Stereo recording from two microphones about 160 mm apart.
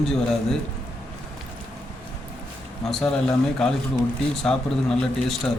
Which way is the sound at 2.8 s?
5° left (ahead or behind).